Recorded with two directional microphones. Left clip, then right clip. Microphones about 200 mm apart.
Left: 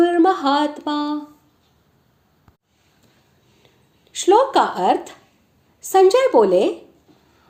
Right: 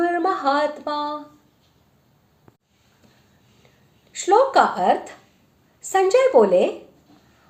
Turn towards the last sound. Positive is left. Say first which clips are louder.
# left 1 dB
turn(degrees=25)  # may be behind; listen again after turning